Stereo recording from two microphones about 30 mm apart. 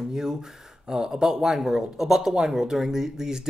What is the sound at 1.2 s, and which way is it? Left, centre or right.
Speech, centre.